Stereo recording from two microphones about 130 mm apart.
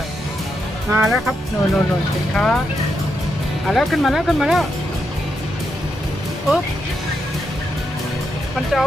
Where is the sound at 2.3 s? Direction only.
5° left (ahead or behind).